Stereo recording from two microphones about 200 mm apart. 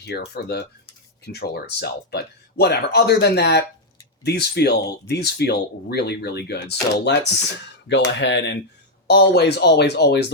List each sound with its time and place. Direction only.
0.0 s speech: 55° left (ahead or behind)